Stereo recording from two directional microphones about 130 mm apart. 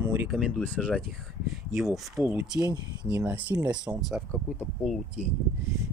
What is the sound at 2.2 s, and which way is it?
Speech, 15° right (ahead or behind).